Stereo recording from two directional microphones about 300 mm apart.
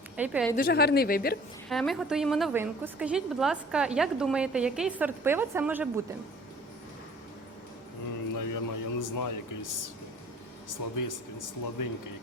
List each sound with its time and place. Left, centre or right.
0.2 s a woman's voice: centre
0.5 s a woman's voice: left
1.7 s a woman's voice: centre
8.4 s a man's voice: left